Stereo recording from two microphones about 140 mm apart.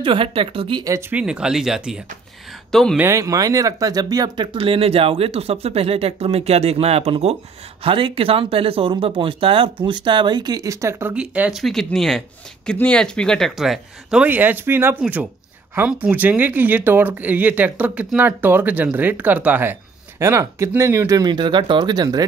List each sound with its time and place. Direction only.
0.0 s speech: 40° right (ahead or behind)
1.1 s speech: 5° right (ahead or behind)
3.0 s speech: 20° right (ahead or behind)
11.6 s speech: centre (ahead or behind)
14.2 s speech: 15° right (ahead or behind); by 22.2 s 30° right (ahead or behind)